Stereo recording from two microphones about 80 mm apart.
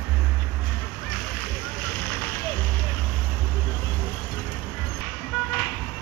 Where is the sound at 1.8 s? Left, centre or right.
Centre.